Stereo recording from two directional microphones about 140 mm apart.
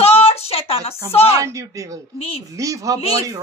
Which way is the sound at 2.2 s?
45° left (ahead or behind).